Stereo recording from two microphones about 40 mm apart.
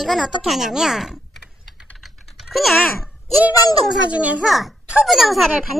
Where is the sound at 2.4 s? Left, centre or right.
Centre.